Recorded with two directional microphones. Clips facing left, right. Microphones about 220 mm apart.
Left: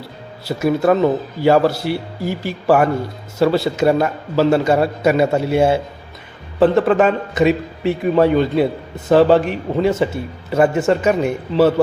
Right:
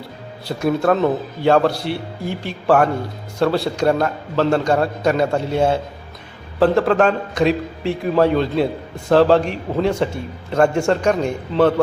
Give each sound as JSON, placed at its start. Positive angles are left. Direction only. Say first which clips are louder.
{"t": 0.4, "sound": "a man's voice", "louder": "left 2 dB", "side_deg": 5}